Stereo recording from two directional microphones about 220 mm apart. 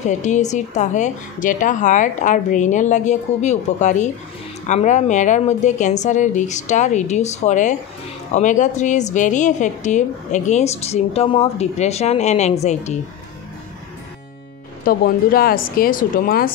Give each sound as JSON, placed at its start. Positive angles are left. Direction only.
{"t": 0.0, "sound": "a woman's voice", "side_deg": 35}
{"t": 14.9, "sound": "a woman's voice", "side_deg": 40}